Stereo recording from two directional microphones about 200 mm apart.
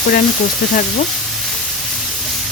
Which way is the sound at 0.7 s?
40° left (ahead or behind).